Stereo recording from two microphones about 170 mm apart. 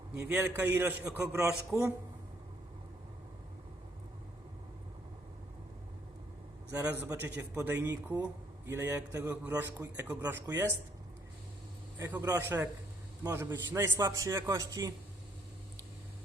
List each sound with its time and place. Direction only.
0.2 s a man's voice: 10° right (ahead or behind)
1.7 s speech: 5° right (ahead or behind)
6.7 s a man's voice: 15° right (ahead or behind)
11.9 s a man's voice: 15° right (ahead or behind)